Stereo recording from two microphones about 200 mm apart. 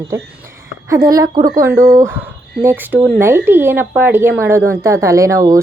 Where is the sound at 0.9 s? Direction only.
20° right (ahead or behind).